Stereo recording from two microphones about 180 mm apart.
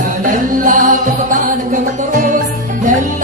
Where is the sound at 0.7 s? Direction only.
45° right (ahead or behind).